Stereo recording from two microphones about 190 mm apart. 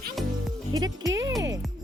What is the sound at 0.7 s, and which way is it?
Music, 20° right (ahead or behind).